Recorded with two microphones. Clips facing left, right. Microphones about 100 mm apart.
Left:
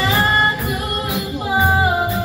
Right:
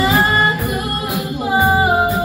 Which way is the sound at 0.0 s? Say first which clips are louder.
Right 3 dB; 30° right (ahead or behind).